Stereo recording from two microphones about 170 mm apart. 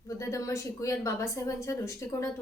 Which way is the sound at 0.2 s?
20° left (ahead or behind).